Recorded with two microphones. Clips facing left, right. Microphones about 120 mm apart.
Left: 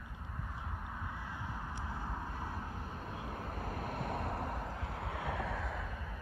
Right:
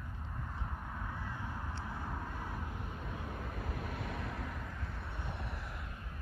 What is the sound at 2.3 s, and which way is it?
Vehicle, 30° left (ahead or behind).